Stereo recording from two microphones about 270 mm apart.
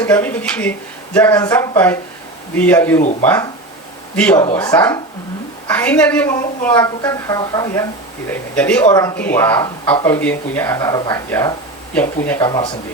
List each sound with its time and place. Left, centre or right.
0.0 s speech: centre
3.0 s speech: left
3.2 s speech: centre